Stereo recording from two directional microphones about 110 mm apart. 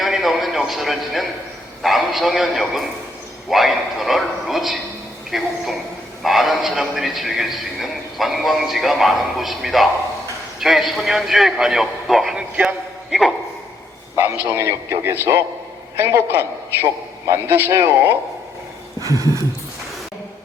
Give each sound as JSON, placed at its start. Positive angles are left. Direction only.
{"t": 0.0, "sound": "a man's voice", "side_deg": 0}
{"t": 14.5, "sound": "a man's voice", "side_deg": -25}
{"t": 19.0, "sound": "a sound", "side_deg": -30}